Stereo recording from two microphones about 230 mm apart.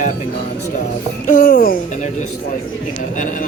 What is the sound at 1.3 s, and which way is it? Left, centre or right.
Speech, left.